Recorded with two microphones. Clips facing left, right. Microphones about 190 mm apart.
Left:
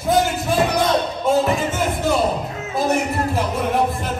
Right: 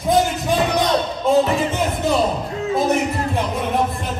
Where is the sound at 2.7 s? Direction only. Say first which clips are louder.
Right 1 dB; centre (ahead or behind).